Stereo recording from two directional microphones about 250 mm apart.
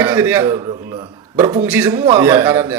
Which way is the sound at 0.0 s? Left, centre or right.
Centre.